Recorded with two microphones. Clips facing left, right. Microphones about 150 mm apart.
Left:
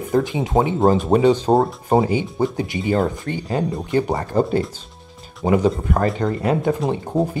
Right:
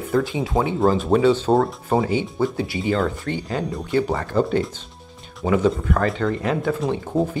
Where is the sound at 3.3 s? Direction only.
45° left (ahead or behind).